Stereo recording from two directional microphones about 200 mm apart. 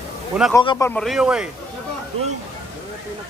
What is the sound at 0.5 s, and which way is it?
Speech, 15° left (ahead or behind).